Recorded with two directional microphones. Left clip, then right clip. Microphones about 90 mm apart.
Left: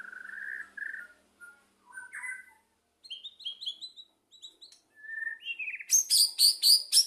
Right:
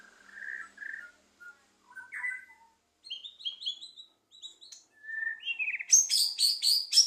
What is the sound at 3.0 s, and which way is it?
Bird, 35° left (ahead or behind).